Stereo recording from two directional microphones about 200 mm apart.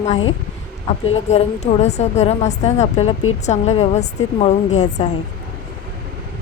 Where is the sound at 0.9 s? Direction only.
30° left (ahead or behind).